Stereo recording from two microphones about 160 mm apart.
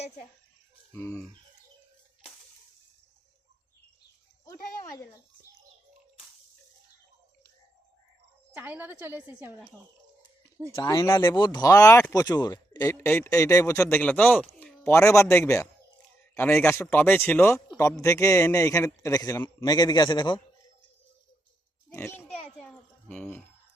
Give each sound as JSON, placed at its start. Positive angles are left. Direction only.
{"t": 0.9, "sound": "a man's voice", "side_deg": 15}
{"t": 4.8, "sound": "a sound", "side_deg": 20}
{"t": 8.5, "sound": "a woman's voice", "side_deg": -10}
{"t": 10.8, "sound": "a man's voice", "side_deg": 20}
{"t": 11.3, "sound": "a man's voice", "side_deg": 25}
{"t": 21.9, "sound": "a man's voice", "side_deg": 15}
{"t": 22.3, "sound": "a sound", "side_deg": 5}